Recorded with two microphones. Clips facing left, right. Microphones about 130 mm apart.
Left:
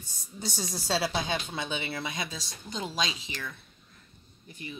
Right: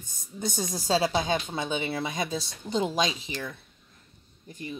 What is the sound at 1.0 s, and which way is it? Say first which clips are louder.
Speech: right 4 dB; 20° right (ahead or behind).